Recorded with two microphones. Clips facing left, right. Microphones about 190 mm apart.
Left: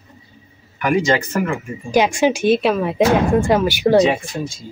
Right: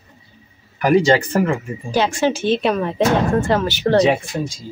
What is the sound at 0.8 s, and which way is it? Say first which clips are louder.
Speech: right 3 dB; 35° right (ahead or behind).